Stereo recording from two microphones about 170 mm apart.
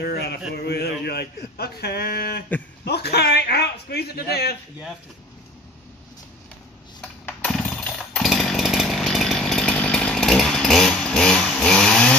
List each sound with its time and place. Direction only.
0.0 s a sound: 70° left (ahead or behind)
0.6 s a man's voice: 70° left (ahead or behind)
7.0 s chainsaw: 5° left (ahead or behind)